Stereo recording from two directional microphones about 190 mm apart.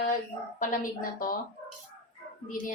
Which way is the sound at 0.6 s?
45° left (ahead or behind).